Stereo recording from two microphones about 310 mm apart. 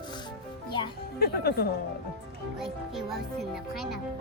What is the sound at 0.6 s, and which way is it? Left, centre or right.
Music, centre.